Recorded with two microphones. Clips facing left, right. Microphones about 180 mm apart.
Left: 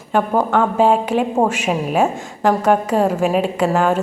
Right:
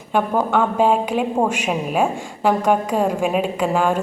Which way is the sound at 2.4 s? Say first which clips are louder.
Left 2 dB; 10° right (ahead or behind).